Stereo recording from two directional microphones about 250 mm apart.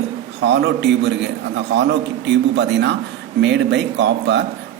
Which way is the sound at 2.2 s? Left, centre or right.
Right.